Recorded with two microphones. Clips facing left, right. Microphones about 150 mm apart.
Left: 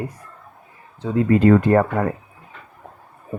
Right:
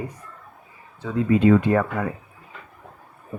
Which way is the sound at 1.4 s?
50° left (ahead or behind).